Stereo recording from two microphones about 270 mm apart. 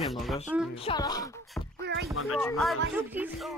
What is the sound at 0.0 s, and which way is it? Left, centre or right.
Speech, centre.